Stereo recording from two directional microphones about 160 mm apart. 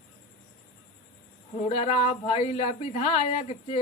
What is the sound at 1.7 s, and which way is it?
Speech, 45° left (ahead or behind).